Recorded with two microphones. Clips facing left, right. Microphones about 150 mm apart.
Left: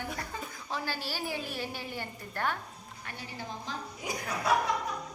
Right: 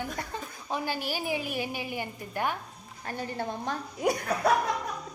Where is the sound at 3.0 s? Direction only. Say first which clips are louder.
Right 10 dB; 40° right (ahead or behind).